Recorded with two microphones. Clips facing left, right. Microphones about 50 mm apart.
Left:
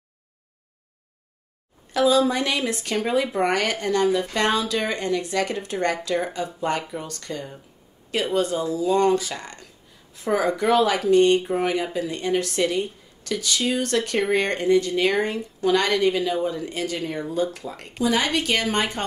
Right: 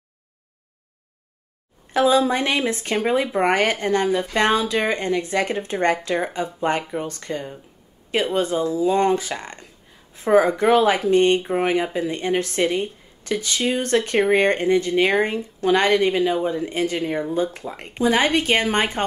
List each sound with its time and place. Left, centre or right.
1.9 s speech: right